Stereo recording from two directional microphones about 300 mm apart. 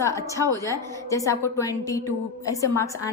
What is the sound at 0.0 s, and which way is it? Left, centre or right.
A woman's voice, centre.